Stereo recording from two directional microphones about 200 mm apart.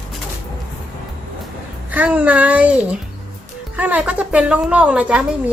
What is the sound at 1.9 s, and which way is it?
A woman's voice, 5° right (ahead or behind).